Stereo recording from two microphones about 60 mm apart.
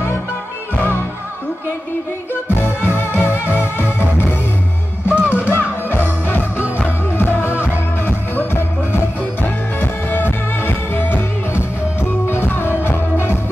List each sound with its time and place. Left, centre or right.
2.5 s music: left
5.0 s music: right
5.5 s music: left
7.1 s music: left